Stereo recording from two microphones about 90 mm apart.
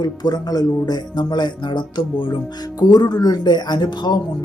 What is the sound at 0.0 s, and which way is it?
Speech, 50° left (ahead or behind).